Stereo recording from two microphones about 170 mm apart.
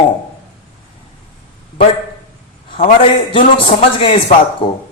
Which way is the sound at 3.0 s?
30° left (ahead or behind).